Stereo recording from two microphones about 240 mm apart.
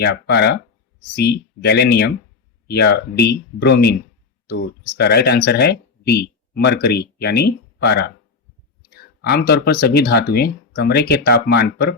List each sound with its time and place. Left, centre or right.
0.0 s speech: left
4.9 s speech: left